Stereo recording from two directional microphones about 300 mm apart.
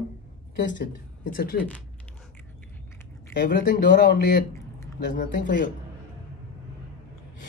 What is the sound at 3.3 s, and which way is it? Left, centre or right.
Speech, left.